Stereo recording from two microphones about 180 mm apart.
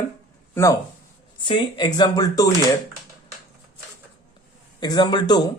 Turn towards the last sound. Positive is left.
turn(degrees=25)  # may be behind; listen again after turning